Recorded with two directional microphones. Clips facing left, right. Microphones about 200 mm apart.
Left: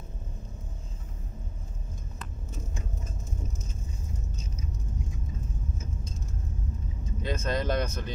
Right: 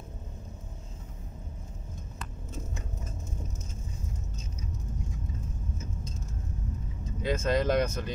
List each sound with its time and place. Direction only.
7.2 s speech: 5° right (ahead or behind)